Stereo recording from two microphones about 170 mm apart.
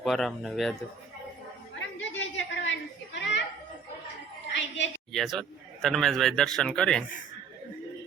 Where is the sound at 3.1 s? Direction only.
90° left.